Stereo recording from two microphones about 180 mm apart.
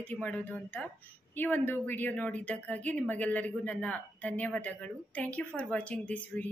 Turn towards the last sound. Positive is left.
turn(degrees=10)  # may be behind; listen again after turning